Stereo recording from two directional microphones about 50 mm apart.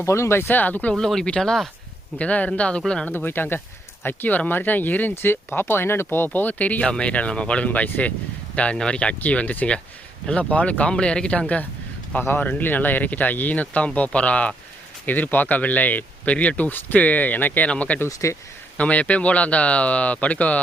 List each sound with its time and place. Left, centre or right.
0.0 s speech: left
0.4 s speech: left
0.9 s speech: centre
2.1 s speech: left
3.1 s speech: left
5.1 s speech: left
6.8 s speech: centre
8.7 s speech: centre
12.4 s speech: left
15.0 s speech: left
18.1 s speech: left
18.8 s speech: left